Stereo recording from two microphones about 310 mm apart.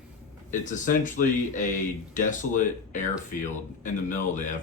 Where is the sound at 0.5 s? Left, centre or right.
Left.